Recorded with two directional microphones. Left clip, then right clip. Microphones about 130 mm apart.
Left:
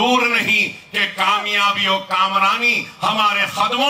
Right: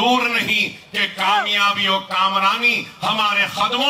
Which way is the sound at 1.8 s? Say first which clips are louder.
Left 1 dB; 20° left (ahead or behind).